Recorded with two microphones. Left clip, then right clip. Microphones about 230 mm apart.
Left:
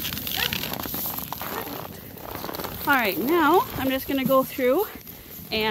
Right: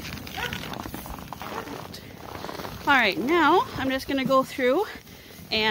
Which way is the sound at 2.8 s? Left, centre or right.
Centre.